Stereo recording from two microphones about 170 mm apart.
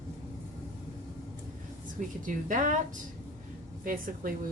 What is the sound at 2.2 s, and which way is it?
Speech, 50° right (ahead or behind).